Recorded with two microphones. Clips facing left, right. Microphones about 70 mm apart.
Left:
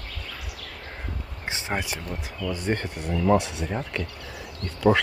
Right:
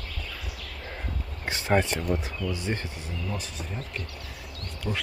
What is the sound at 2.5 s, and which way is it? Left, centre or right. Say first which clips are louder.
Speech: left 4 dB; left.